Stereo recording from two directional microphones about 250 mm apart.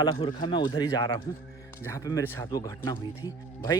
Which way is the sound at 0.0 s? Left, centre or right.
Centre.